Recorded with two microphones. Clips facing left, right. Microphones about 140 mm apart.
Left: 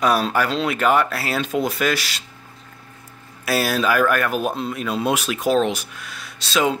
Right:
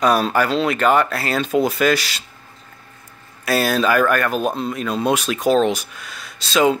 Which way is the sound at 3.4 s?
5° left (ahead or behind).